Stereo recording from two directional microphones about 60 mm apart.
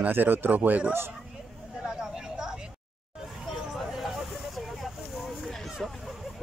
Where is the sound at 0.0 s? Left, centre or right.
Right.